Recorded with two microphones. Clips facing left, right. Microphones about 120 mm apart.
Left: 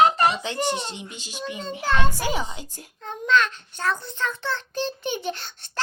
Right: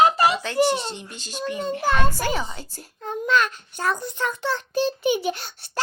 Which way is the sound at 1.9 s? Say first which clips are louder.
Right 1 dB; 10° right (ahead or behind).